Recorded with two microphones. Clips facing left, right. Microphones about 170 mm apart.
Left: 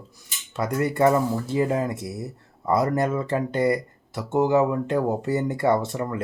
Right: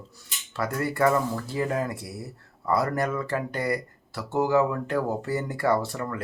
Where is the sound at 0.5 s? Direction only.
20° left (ahead or behind).